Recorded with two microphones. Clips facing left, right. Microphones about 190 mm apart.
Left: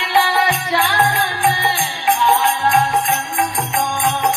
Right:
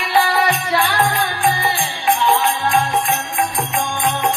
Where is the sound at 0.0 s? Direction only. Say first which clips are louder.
Even; 25° left (ahead or behind).